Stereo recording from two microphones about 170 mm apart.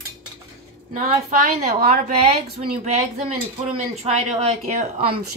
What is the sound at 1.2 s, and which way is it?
A woman's voice, 50° right (ahead or behind).